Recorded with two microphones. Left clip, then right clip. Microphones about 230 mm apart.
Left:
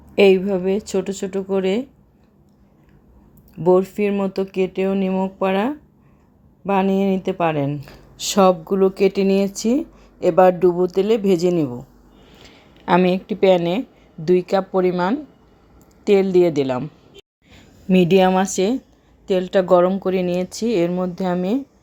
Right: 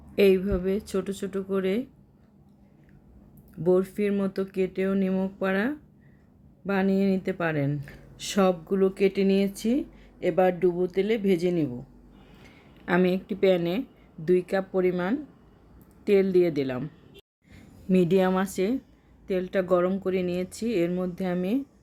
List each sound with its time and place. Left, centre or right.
0.1 s a woman's voice: centre
3.6 s a woman's voice: centre